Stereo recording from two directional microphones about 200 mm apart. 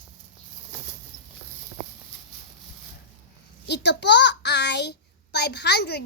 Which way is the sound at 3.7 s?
60° left (ahead or behind).